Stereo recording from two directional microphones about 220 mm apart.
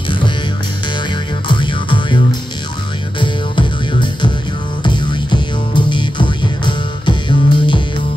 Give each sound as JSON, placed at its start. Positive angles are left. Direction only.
{"t": 1.5, "sound": "music", "side_deg": 20}